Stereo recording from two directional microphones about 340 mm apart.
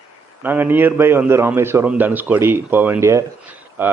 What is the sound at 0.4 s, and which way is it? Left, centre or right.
A man's voice, centre.